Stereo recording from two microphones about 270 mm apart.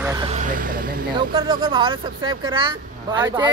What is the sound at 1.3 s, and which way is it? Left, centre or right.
Speech, centre.